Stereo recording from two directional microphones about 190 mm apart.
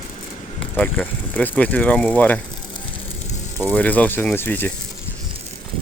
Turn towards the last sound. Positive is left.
turn(degrees=10)  # may be behind; listen again after turning